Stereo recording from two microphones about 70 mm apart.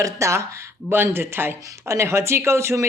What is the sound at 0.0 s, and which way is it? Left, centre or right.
Speech, right.